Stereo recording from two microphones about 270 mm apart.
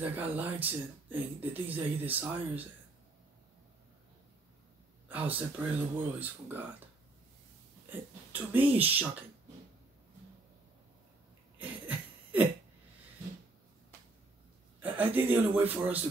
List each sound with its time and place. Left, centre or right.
0.0 s speech: centre
5.0 s speech: centre
7.9 s speech: centre
11.5 s a sound: centre
14.8 s speech: centre